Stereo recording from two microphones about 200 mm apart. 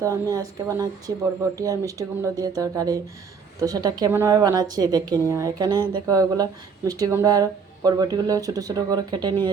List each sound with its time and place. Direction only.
0.0 s a woman's voice: 15° right (ahead or behind)